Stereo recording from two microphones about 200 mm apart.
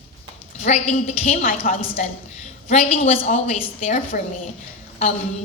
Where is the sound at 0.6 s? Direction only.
35° left (ahead or behind).